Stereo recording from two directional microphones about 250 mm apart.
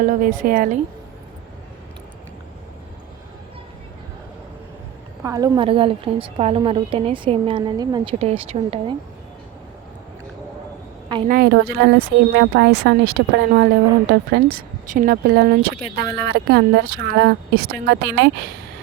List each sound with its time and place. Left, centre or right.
0.0 s speech: right
5.2 s a woman's voice: centre
11.3 s speech: right